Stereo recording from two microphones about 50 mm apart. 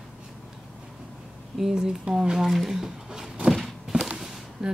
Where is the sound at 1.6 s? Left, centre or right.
Centre.